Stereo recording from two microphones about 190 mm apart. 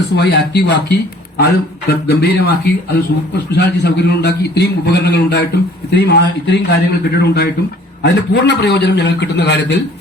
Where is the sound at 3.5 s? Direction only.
60° left (ahead or behind).